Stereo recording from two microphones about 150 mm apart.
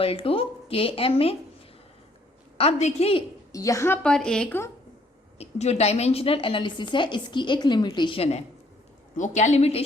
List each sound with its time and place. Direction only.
0.0 s a woman's voice: 40° left (ahead or behind)
2.6 s a woman's voice: 45° left (ahead or behind)
3.5 s a woman's voice: 20° left (ahead or behind)
5.4 s a woman's voice: 45° left (ahead or behind)
9.1 s a woman's voice: 55° left (ahead or behind)